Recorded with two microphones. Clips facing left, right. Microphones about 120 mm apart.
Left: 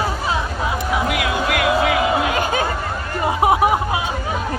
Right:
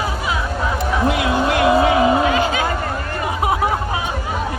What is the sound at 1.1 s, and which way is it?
Music, 30° right (ahead or behind).